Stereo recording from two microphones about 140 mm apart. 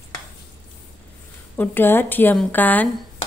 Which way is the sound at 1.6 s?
15° left (ahead or behind).